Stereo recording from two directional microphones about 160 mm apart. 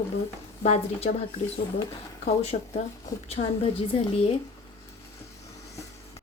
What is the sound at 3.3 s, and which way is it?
Speech, 40° left (ahead or behind).